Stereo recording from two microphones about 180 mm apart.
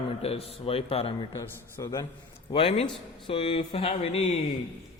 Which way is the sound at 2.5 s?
35° left (ahead or behind).